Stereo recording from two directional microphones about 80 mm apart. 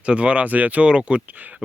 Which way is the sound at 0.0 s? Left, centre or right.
Centre.